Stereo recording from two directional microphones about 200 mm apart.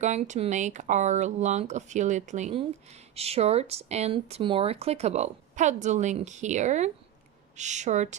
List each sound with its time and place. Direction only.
0.0 s speech: 35° right (ahead or behind)